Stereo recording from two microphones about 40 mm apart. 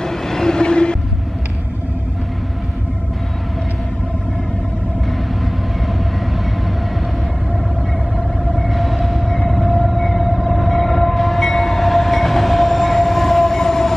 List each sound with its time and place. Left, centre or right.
0.0 s train: centre
8.5 s train: centre